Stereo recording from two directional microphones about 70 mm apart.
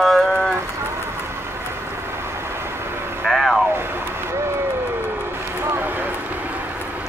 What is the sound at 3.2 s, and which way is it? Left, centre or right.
Vehicle, centre.